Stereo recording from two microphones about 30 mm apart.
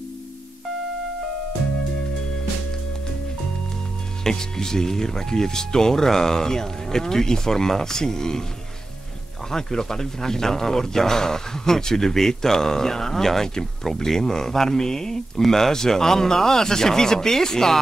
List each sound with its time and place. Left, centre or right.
4.2 s speech: centre
9.5 s a man's voice: centre